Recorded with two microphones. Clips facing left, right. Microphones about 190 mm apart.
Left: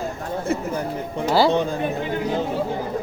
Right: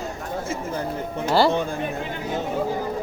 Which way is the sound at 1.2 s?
5° left (ahead or behind).